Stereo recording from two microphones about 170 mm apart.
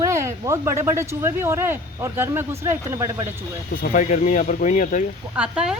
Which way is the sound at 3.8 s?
50° left (ahead or behind).